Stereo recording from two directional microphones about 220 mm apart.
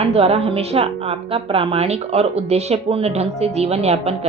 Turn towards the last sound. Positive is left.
turn(degrees=-30)  # may be behind; listen again after turning